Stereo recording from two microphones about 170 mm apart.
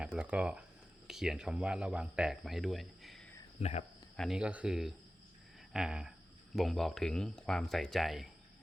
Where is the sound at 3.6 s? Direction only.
40° left (ahead or behind).